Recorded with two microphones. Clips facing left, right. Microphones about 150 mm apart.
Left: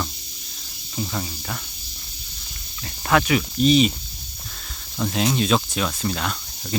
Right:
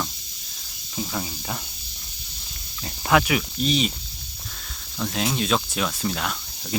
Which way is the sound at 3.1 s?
10° right (ahead or behind).